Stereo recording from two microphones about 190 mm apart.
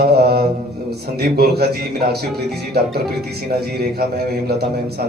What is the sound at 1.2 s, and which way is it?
Speech, 55° right (ahead or behind).